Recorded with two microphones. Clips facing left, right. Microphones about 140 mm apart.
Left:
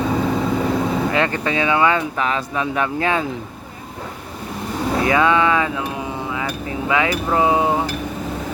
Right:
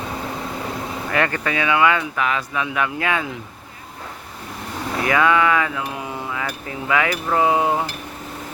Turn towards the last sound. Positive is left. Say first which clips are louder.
# left 1 dB
turn(degrees=25)  # may be behind; listen again after turning